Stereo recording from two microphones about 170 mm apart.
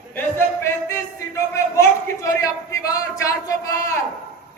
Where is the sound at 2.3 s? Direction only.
20° left (ahead or behind).